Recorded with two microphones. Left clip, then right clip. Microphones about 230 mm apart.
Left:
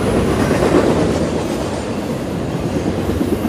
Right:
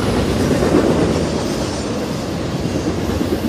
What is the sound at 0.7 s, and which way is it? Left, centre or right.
Train, left.